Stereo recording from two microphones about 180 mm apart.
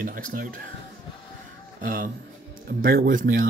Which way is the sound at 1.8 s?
50° right (ahead or behind).